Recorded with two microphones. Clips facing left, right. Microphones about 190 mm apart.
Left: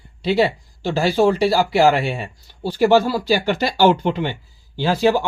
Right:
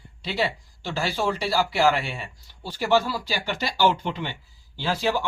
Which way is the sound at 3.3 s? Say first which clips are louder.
Left 11 dB; 65° left (ahead or behind).